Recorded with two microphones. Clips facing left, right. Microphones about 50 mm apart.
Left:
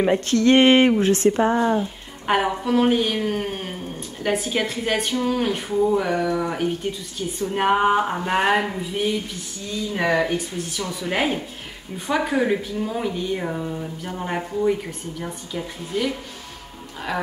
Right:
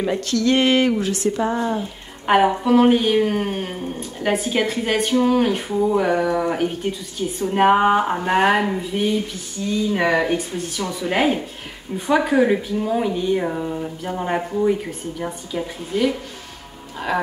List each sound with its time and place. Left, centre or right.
0.0 s speech: left
1.5 s speech: centre
2.2 s speech: centre
9.9 s speech: centre